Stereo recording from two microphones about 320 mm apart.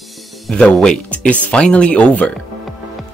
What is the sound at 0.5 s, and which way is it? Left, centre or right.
Speech, centre.